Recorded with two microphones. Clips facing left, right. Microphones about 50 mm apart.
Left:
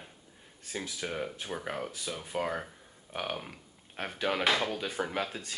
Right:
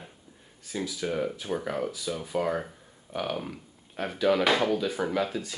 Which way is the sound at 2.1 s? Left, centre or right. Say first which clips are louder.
Right 5 dB; centre.